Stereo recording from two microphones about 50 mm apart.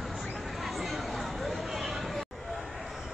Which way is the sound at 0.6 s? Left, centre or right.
Centre.